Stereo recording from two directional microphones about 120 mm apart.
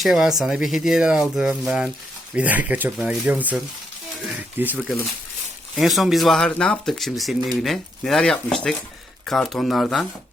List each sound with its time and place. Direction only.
0.0 s speech: 5° right (ahead or behind)
4.6 s speech: 15° right (ahead or behind)
5.7 s speech: centre (ahead or behind)